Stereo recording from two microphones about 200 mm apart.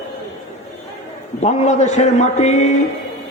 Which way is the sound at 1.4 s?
35° left (ahead or behind).